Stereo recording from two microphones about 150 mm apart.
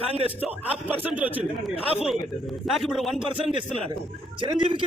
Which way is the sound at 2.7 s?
Centre (ahead or behind).